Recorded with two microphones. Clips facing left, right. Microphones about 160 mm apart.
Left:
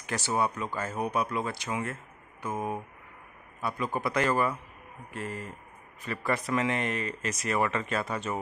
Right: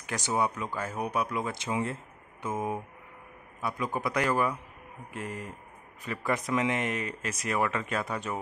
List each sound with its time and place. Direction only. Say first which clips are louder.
0.1 s speech: even; 15° right (ahead or behind)
1.6 s speech: right 2 dB; 25° right (ahead or behind)
3.6 s speech: left 1 dB; 10° right (ahead or behind)